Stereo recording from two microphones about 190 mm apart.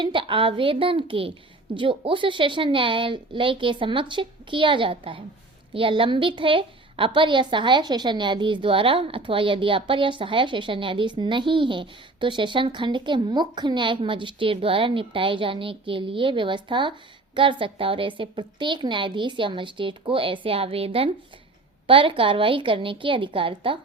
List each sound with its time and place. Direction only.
0.0 s a woman's voice: 25° right (ahead or behind)